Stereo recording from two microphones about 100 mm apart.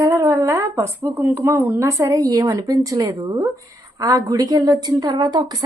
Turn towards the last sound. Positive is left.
turn(degrees=-45)  # may be behind; listen again after turning